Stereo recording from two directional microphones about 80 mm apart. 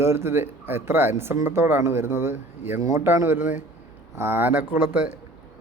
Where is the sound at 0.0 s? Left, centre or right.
Right.